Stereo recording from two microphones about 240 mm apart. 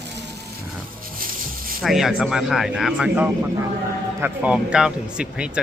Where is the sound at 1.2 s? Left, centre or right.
Right.